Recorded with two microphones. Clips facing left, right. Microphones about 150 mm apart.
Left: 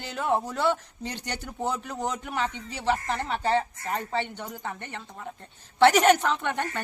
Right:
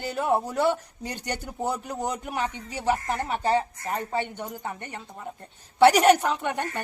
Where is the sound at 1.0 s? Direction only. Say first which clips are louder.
Even; 45° right (ahead or behind).